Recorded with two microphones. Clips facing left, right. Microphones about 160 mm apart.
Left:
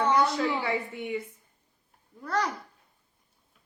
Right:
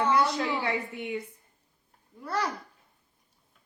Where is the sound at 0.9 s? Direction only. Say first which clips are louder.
Left 1 dB; 20° right (ahead or behind).